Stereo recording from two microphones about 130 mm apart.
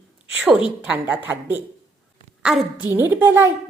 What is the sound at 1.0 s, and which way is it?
A woman's voice, 15° right (ahead or behind).